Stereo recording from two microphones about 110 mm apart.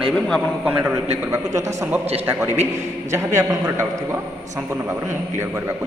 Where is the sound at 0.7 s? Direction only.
15° right (ahead or behind).